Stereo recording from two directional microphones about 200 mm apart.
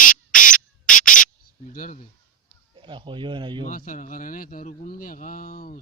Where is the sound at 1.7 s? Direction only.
40° left (ahead or behind).